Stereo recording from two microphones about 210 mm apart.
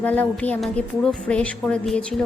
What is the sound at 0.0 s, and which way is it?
Speech, 5° left (ahead or behind).